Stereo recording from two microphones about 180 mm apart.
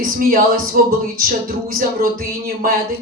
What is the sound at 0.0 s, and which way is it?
Speech, 50° right (ahead or behind).